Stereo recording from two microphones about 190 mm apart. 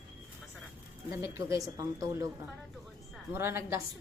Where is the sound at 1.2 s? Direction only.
15° right (ahead or behind).